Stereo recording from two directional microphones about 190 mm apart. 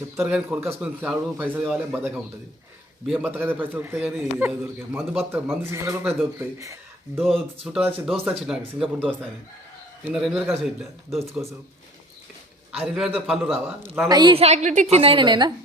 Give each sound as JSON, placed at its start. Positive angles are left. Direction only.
{"t": 0.2, "sound": "a man's voice", "side_deg": -10}
{"t": 10.0, "sound": "speech", "side_deg": -5}
{"t": 12.8, "sound": "speech", "side_deg": 0}
{"t": 13.5, "sound": "a man's voice", "side_deg": -10}
{"t": 14.1, "sound": "a woman's voice", "side_deg": -25}